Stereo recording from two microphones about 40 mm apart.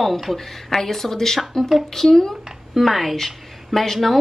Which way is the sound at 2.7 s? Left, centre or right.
Centre.